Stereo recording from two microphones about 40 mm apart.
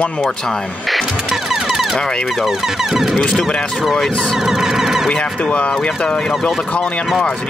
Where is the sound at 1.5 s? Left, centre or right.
Centre.